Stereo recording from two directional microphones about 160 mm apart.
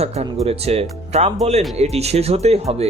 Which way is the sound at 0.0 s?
40° right (ahead or behind).